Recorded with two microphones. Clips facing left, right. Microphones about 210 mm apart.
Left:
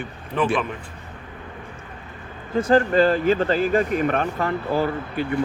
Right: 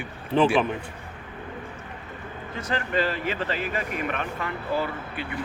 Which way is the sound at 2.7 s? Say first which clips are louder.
Left 9 dB; 40° left (ahead or behind).